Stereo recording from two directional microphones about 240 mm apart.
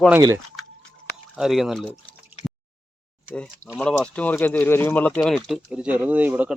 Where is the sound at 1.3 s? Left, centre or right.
Centre.